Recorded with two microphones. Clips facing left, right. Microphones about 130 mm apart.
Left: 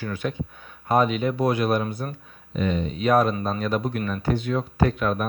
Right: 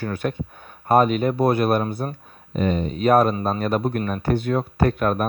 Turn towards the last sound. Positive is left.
turn(degrees=-50)  # may be behind; listen again after turning